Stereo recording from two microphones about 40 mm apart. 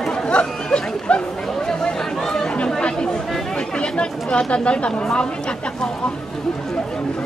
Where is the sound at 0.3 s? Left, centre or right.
Left.